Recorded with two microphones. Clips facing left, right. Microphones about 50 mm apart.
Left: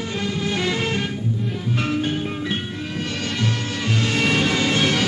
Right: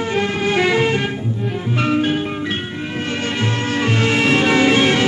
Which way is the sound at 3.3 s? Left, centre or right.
Right.